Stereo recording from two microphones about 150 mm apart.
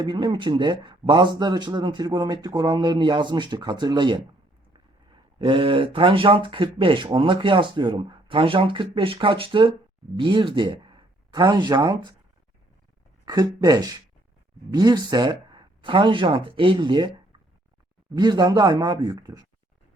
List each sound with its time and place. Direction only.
0.0 s speech: 30° right (ahead or behind)
5.4 s speech: 35° right (ahead or behind)
13.2 s speech: 25° right (ahead or behind)
18.1 s speech: 30° right (ahead or behind)